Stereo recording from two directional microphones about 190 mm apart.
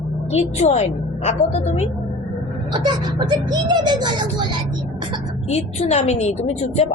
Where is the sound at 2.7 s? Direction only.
25° right (ahead or behind).